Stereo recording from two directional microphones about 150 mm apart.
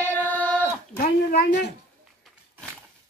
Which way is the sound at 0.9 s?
60° left (ahead or behind).